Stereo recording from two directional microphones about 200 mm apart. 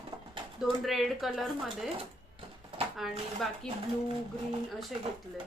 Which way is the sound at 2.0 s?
25° right (ahead or behind).